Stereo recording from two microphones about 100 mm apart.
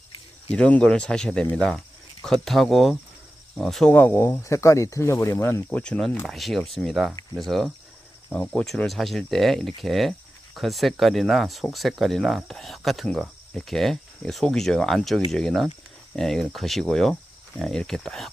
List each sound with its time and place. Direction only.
0.5 s speech: 10° left (ahead or behind)
3.9 s speech: 20° left (ahead or behind)
5.7 s speech: 10° left (ahead or behind)
6.2 s speech: centre (ahead or behind)
8.3 s speech: 15° left (ahead or behind)
8.6 s speech: centre (ahead or behind)